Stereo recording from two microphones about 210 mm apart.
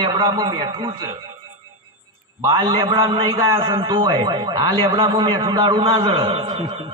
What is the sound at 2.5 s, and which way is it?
A man's voice, 20° right (ahead or behind).